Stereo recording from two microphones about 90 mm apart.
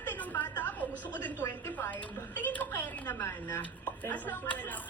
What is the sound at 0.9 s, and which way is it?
Speech, 20° right (ahead or behind).